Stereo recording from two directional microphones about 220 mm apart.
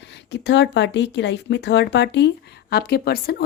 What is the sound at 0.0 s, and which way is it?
A woman's voice, 50° left (ahead or behind).